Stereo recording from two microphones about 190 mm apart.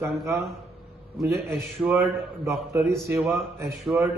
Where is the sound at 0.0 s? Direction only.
15° right (ahead or behind).